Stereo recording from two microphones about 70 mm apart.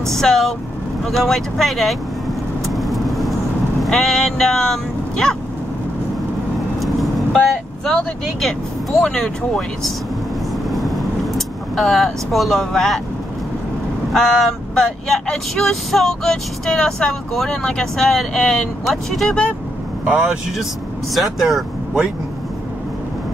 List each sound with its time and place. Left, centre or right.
0.1 s speech: centre
2.6 s vehicle: centre
3.8 s speech: centre
6.8 s vehicle: centre
9.0 s speech: centre
10.7 s vehicle: centre
14.1 s speech: centre
20.1 s speech: centre
21.1 s speech: centre